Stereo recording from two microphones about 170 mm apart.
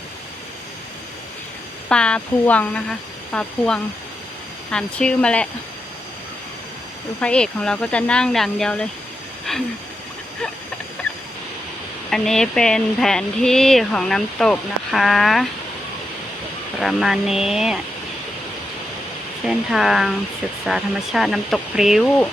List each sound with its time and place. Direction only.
1.9 s speech: 5° left (ahead or behind)
4.7 s speech: 5° left (ahead or behind)
7.2 s speech: 5° left (ahead or behind)
12.1 s speech: 5° left (ahead or behind)
16.8 s speech: centre (ahead or behind)
19.5 s speech: centre (ahead or behind)